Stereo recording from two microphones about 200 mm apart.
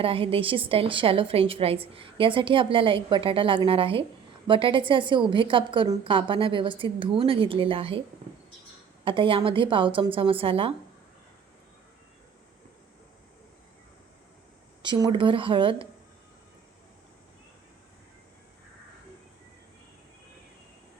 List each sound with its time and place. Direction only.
0.0 s a woman's voice: 25° right (ahead or behind)
9.0 s a woman's voice: 25° right (ahead or behind)
14.8 s a woman's voice: 25° right (ahead or behind)